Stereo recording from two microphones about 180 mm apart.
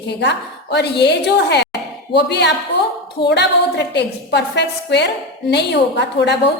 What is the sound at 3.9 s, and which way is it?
A woman's voice, 70° left (ahead or behind).